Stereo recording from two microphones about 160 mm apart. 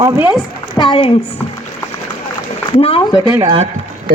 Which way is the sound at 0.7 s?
30° left (ahead or behind).